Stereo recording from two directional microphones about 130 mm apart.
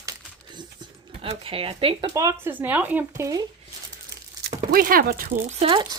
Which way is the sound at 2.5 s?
15° right (ahead or behind).